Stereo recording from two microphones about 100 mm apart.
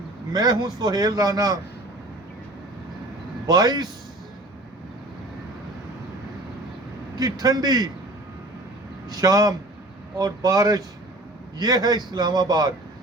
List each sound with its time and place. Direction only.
0.3 s a man's voice: 45° right (ahead or behind)
3.4 s a man's voice: 40° right (ahead or behind)
7.2 s a man's voice: 40° right (ahead or behind)
9.1 s a man's voice: 40° right (ahead or behind)